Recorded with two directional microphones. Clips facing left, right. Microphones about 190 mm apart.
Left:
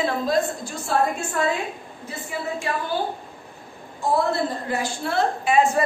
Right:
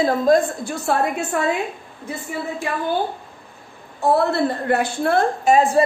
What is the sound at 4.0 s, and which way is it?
A woman's voice, 65° right (ahead or behind).